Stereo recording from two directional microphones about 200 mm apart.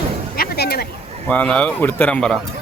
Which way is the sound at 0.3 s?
50° left (ahead or behind).